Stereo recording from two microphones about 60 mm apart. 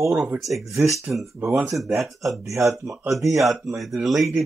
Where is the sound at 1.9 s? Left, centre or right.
Centre.